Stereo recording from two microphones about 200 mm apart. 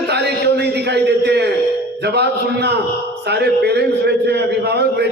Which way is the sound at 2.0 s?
55° right (ahead or behind).